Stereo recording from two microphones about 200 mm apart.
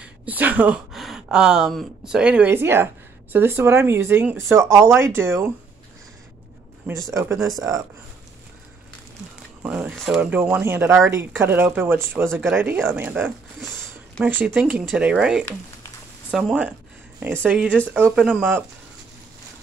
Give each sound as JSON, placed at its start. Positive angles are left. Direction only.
{"t": 0.0, "sound": "speech", "side_deg": -5}
{"t": 6.9, "sound": "speech", "side_deg": -15}
{"t": 9.6, "sound": "speech", "side_deg": -5}
{"t": 13.6, "sound": "a sound", "side_deg": 0}
{"t": 14.3, "sound": "speech", "side_deg": -10}